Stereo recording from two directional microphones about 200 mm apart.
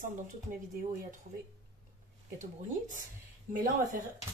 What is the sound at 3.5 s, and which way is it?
Speech, 40° right (ahead or behind).